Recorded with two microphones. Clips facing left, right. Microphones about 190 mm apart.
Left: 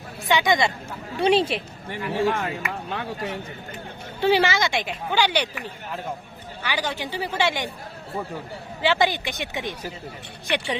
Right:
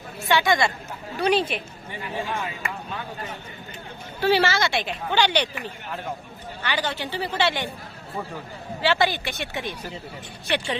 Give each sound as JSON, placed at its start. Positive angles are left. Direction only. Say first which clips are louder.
{"t": 0.3, "sound": "a woman's voice", "louder": "even", "side_deg": 15}
{"t": 1.9, "sound": "a man's voice", "louder": "left 7 dB", "side_deg": 65}
{"t": 4.2, "sound": "a woman's voice", "louder": "left 1 dB", "side_deg": 15}
{"t": 6.6, "sound": "a woman's voice", "louder": "even", "side_deg": 10}
{"t": 8.8, "sound": "a woman's voice", "louder": "left 1 dB", "side_deg": 15}